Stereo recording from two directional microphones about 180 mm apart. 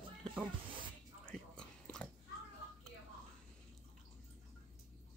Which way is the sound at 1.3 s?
5° left (ahead or behind).